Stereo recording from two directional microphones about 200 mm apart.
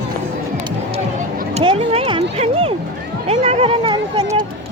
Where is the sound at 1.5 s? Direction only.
25° right (ahead or behind).